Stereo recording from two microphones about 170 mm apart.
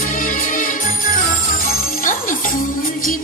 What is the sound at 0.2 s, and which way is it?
Music, 50° left (ahead or behind).